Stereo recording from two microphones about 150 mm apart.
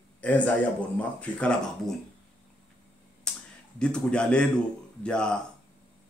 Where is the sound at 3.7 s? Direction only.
5° left (ahead or behind).